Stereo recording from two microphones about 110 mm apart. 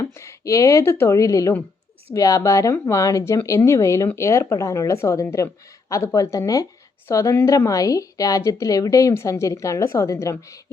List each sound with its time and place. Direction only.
0.0 s a woman's voice: 25° left (ahead or behind)